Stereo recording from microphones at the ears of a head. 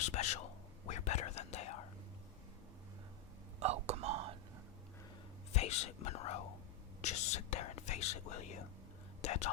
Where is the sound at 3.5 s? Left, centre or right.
Right.